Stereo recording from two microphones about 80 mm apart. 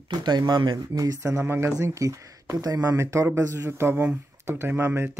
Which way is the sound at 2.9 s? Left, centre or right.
Right.